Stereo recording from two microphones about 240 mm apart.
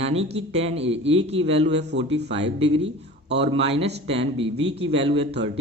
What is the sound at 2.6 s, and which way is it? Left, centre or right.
Speech, right.